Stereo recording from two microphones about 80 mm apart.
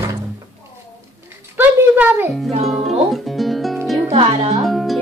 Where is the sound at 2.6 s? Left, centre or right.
Centre.